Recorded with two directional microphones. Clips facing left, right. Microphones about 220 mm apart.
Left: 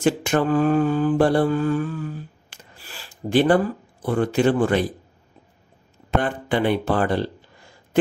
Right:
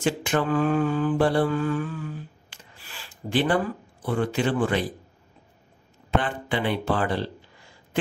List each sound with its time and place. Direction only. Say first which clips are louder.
0.0 s mantra: left 4 dB; 45° left (ahead or behind)
4.0 s speech: left 5 dB; 45° left (ahead or behind)
6.0 s speech: left 3 dB; 45° left (ahead or behind)